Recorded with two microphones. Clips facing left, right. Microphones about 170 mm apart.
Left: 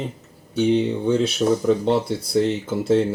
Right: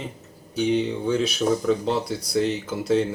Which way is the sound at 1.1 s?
30° left (ahead or behind).